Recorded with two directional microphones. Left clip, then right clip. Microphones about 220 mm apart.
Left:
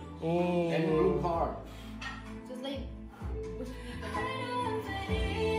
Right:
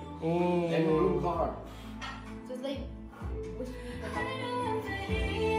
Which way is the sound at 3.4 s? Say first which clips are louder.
Right 1 dB; 20° right (ahead or behind).